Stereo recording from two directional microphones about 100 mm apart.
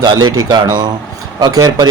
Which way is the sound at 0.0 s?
45° right (ahead or behind).